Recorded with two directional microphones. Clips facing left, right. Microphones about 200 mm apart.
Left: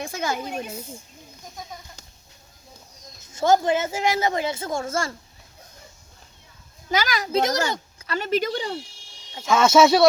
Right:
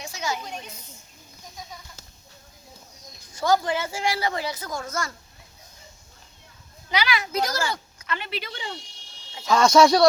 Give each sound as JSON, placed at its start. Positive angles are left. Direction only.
{"t": 0.0, "sound": "a child's voice", "side_deg": 55}
{"t": 3.3, "sound": "a woman's voice", "side_deg": 25}
{"t": 6.9, "sound": "a child's voice", "side_deg": 45}
{"t": 7.3, "sound": "a woman's voice", "side_deg": 20}
{"t": 7.7, "sound": "speech", "side_deg": 35}
{"t": 9.4, "sound": "speech", "side_deg": 5}